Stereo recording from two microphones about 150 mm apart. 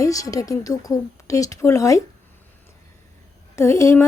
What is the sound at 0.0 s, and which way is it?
A woman's voice, 20° left (ahead or behind).